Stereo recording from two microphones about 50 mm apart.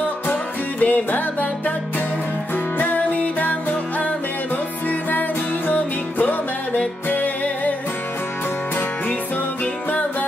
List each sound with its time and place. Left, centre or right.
0.3 s music: left
2.8 s music: left
5.7 s music: left